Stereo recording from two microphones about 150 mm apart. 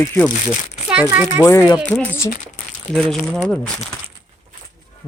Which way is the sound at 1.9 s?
5° left (ahead or behind).